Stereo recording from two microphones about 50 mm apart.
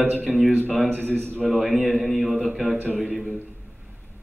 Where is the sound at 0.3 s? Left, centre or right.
Centre.